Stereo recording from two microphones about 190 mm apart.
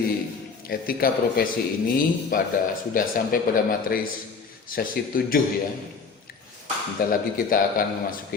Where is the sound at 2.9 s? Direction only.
50° left (ahead or behind).